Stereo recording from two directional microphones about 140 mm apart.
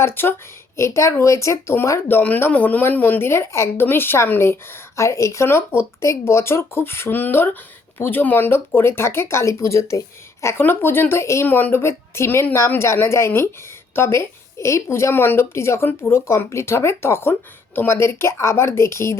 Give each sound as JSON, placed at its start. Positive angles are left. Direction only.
{"t": 0.0, "sound": "a woman's voice", "side_deg": 15}